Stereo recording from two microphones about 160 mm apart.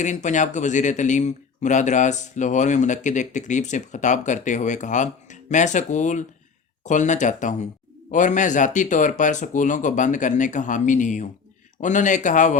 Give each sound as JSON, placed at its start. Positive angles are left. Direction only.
{"t": 0.0, "sound": "speech", "side_deg": 50}